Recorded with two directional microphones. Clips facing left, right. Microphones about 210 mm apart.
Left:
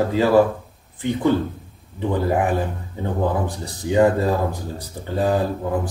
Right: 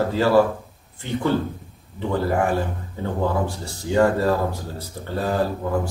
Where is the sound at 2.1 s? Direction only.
15° left (ahead or behind).